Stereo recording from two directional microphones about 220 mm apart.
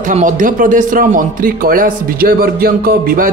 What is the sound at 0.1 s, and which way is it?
Speech, 35° right (ahead or behind).